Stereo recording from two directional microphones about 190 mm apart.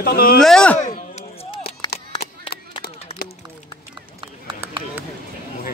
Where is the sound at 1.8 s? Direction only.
25° left (ahead or behind).